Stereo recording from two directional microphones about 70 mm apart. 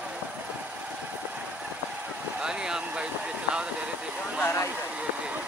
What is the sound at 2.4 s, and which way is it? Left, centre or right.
Speech, centre.